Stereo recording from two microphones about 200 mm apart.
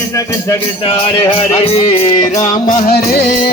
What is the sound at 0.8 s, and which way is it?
Music, 30° left (ahead or behind).